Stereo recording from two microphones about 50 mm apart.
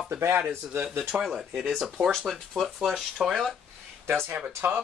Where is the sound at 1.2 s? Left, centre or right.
Centre.